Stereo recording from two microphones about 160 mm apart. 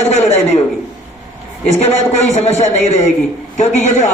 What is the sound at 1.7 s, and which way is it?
A man's voice, 40° left (ahead or behind).